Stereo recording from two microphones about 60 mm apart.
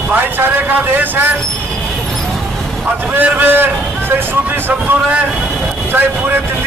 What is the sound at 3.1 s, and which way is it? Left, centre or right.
Speech, right.